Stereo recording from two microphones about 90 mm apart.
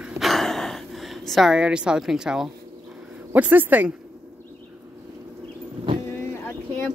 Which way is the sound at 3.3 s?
20° right (ahead or behind).